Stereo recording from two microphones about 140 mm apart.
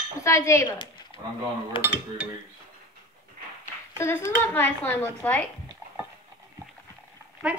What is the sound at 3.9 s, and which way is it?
Speech, 20° left (ahead or behind).